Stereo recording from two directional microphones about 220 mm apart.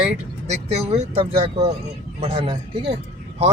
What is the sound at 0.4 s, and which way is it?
Speech, 30° right (ahead or behind).